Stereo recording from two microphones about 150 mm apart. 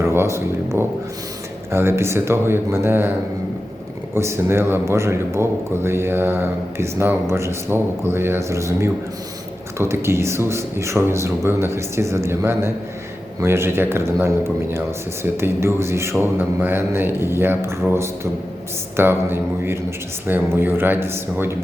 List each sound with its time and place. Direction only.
0.0 s a man's voice: 15° right (ahead or behind)